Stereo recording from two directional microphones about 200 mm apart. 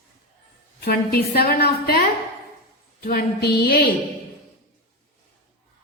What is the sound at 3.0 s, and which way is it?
Speech, 50° left (ahead or behind).